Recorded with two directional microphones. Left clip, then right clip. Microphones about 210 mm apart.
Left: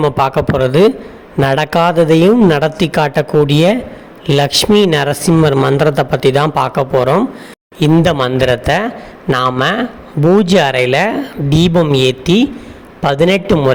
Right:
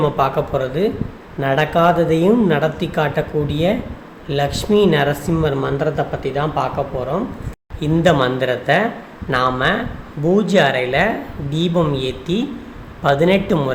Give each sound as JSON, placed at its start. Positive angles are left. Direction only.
{"t": 0.0, "sound": "a man's voice", "side_deg": 45}